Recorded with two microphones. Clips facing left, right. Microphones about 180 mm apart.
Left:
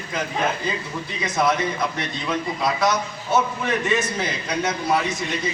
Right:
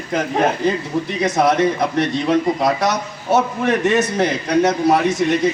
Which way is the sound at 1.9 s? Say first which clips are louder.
Right 11 dB; 75° right (ahead or behind).